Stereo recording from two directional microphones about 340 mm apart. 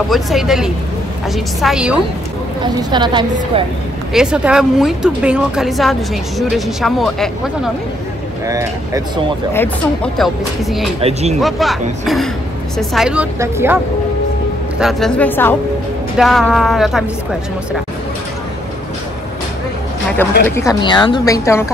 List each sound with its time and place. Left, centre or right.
0.1 s a woman's voice: centre
2.6 s a woman's voice: centre
4.1 s a woman's voice: centre
9.5 s a woman's voice: centre
11.0 s a woman's voice: centre
11.3 s a woman's voice: centre
14.8 s a woman's voice: centre
20.4 s a woman's voice: centre